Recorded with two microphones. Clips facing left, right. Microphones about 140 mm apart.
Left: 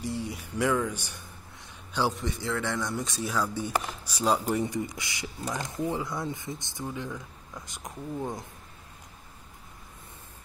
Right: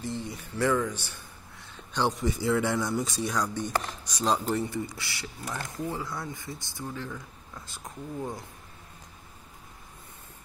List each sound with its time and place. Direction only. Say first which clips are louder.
0.0 s a man's voice: left 1 dB; 10° left (ahead or behind)
2.2 s speech: right 5 dB; 10° right (ahead or behind); by 8.5 s 20° left (ahead or behind)